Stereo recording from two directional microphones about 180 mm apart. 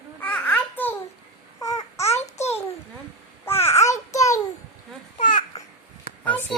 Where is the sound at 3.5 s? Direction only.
15° left (ahead or behind).